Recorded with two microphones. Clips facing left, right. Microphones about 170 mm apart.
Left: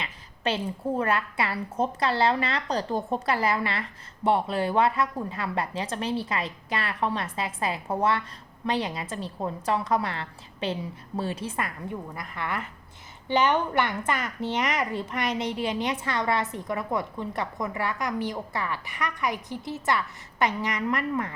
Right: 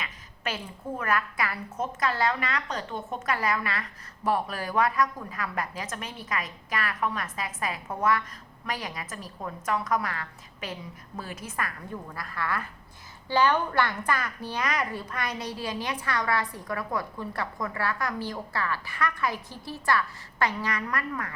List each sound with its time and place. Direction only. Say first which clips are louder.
0.0 s a woman's voice: left 5 dB; 30° left (ahead or behind)